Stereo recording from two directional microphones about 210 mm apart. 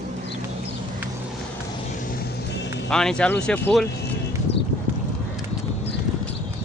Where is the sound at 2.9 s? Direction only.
5° left (ahead or behind).